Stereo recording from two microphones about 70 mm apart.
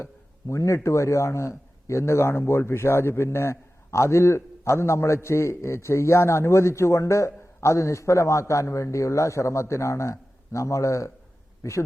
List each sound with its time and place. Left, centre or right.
0.0 s speech: left